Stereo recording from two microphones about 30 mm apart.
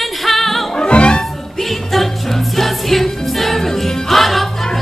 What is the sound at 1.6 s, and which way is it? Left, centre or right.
Music, centre.